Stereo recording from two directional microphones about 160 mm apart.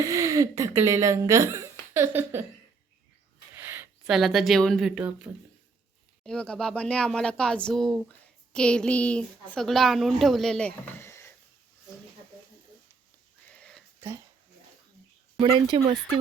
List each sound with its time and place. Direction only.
0.0 s speech: 20° right (ahead or behind)
3.5 s a sound: 15° right (ahead or behind)
4.0 s speech: centre (ahead or behind)
6.2 s speech: 5° left (ahead or behind)
13.5 s a sound: 5° left (ahead or behind)
15.4 s speech: 30° right (ahead or behind)